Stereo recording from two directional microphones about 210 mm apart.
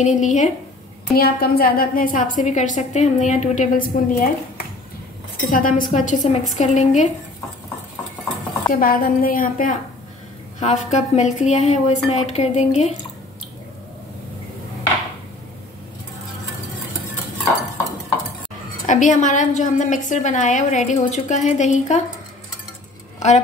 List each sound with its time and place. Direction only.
0.0 s a woman's voice: 35° left (ahead or behind)
5.5 s a woman's voice: 40° left (ahead or behind)
8.7 s a woman's voice: 45° left (ahead or behind)
18.9 s a woman's voice: 35° left (ahead or behind)
23.1 s a sound: 35° left (ahead or behind)